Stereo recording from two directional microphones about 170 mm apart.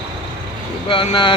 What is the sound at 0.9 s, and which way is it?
Speech, 30° left (ahead or behind).